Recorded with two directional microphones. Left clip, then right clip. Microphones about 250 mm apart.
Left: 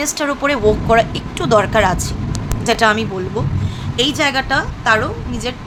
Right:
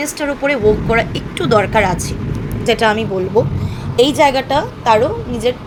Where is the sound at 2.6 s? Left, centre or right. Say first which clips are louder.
Even; centre.